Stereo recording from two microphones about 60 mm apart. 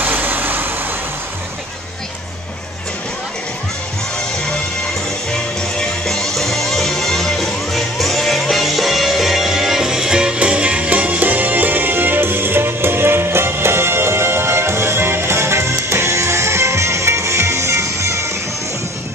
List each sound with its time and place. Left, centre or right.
0.0 s vehicle: right
5.3 s music: centre; by 18.3 s right